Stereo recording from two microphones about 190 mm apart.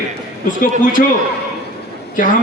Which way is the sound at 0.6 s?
45° left (ahead or behind).